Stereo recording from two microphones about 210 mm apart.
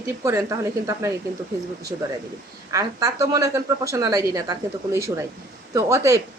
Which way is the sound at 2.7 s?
15° right (ahead or behind).